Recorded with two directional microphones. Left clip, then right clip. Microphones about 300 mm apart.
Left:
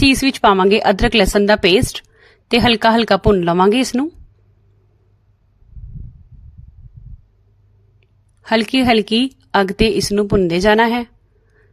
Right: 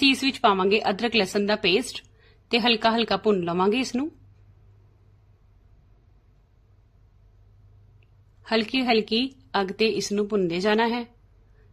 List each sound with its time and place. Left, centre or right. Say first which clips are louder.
0.0 s a woman's voice: left 7 dB; left
8.4 s a woman's voice: left 9 dB; left